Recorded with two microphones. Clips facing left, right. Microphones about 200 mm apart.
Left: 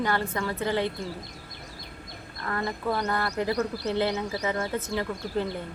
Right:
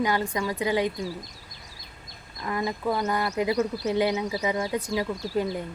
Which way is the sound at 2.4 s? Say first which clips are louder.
Right 2 dB; 15° right (ahead or behind).